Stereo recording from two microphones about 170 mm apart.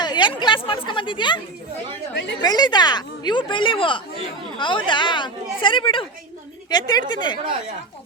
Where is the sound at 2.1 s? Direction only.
90° left.